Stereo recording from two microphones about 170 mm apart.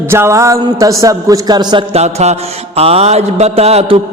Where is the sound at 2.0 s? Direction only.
40° right (ahead or behind).